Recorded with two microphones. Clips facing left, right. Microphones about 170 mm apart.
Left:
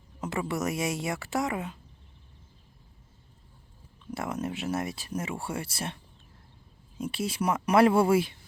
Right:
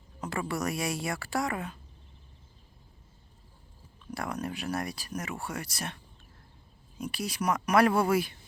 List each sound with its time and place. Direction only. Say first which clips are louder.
0.2 s speech: left 2 dB; 20° left (ahead or behind)
4.1 s speech: left 2 dB; 20° left (ahead or behind)
7.0 s speech: left 3 dB; 25° left (ahead or behind)